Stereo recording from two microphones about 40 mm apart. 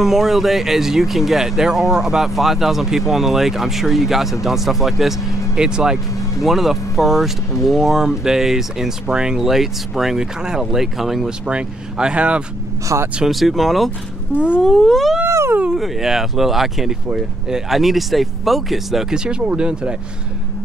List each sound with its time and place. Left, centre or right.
0.0 s speech: centre
5.6 s speech: centre
6.4 s speech: centre
11.4 s speech: right
13.3 s speech: centre
14.3 s speech: right
14.6 s speech: centre
17.7 s speech: centre
19.1 s speech: centre